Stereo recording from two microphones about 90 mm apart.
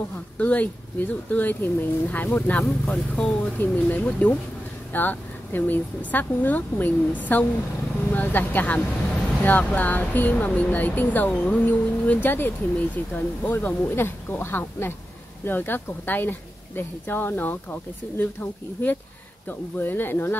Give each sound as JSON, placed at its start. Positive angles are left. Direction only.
{"t": 0.4, "sound": "speech", "side_deg": 15}
{"t": 2.6, "sound": "speech", "side_deg": 5}
{"t": 3.5, "sound": "speech", "side_deg": 20}